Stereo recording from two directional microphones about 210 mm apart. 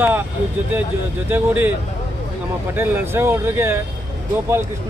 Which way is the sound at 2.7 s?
10° right (ahead or behind).